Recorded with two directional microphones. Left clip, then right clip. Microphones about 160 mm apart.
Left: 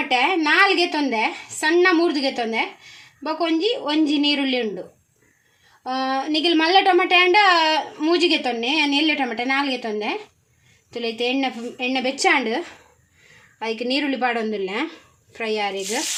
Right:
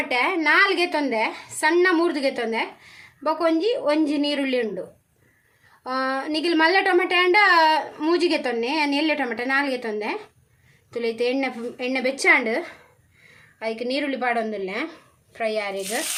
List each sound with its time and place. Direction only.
0.1 s speech: 30° left (ahead or behind)
5.8 s speech: 25° left (ahead or behind)
11.3 s speech: 20° left (ahead or behind)
13.6 s a woman's voice: 40° left (ahead or behind)